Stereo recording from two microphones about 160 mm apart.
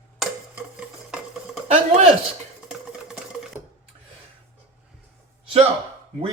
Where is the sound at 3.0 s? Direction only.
5° right (ahead or behind).